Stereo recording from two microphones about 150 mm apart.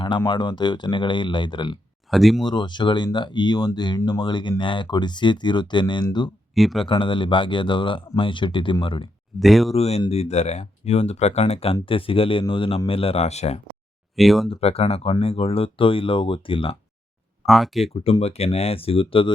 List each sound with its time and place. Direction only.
0.3 s speech: 30° left (ahead or behind)
2.0 s speech: centre (ahead or behind)
2.4 s speech: 30° left (ahead or behind)
6.5 s speech: centre (ahead or behind)
6.8 s speech: 35° left (ahead or behind)
9.4 s speech: centre (ahead or behind)
9.7 s speech: 45° left (ahead or behind)
14.2 s speech: centre (ahead or behind)
14.5 s speech: 40° left (ahead or behind)
17.4 s speech: centre (ahead or behind)
17.9 s speech: 40° left (ahead or behind)